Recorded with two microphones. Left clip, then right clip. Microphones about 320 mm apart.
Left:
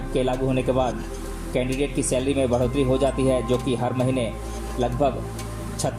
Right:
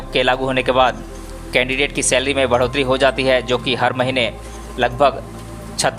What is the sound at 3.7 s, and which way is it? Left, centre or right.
A man's voice, right.